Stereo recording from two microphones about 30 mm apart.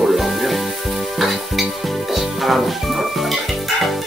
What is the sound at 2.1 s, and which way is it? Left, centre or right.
Music, centre.